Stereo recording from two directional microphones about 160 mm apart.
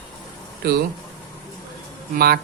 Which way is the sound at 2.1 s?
75° right (ahead or behind).